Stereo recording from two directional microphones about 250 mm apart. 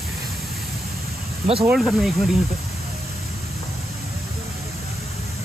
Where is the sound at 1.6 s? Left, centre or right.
Centre.